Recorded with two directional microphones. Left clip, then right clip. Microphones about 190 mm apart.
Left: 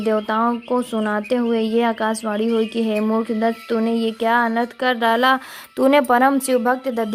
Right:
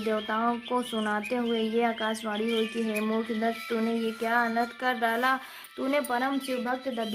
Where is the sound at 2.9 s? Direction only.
40° left (ahead or behind).